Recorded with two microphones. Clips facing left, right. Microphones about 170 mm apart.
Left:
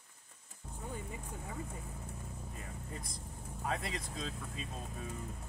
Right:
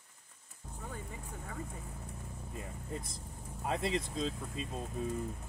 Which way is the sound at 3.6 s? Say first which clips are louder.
Right 5 dB; 25° right (ahead or behind).